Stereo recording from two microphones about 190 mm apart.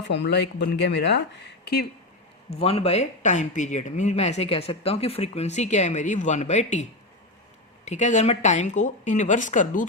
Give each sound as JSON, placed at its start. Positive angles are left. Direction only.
{"t": 0.0, "sound": "speech", "side_deg": 65}
{"t": 2.5, "sound": "speech", "side_deg": 30}
{"t": 7.9, "sound": "speech", "side_deg": 40}